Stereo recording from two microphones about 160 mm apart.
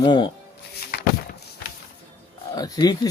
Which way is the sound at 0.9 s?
80° left.